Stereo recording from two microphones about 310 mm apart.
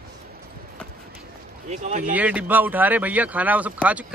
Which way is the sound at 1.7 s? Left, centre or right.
Right.